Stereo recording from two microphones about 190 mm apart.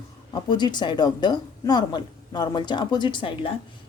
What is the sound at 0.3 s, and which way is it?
Speech, 25° left (ahead or behind).